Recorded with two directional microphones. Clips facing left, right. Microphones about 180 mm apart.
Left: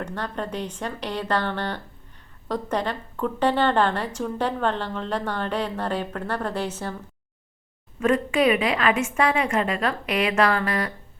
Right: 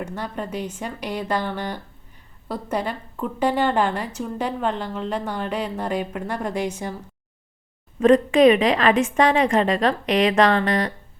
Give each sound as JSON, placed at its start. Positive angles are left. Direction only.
{"t": 0.0, "sound": "a woman's voice", "side_deg": -10}
{"t": 7.9, "sound": "a woman's voice", "side_deg": -35}